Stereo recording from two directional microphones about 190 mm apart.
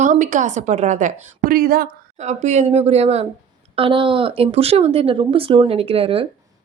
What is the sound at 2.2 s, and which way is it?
A woman's voice, 35° right (ahead or behind).